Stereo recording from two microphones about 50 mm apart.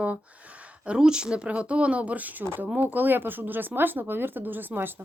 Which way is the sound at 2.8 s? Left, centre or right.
Right.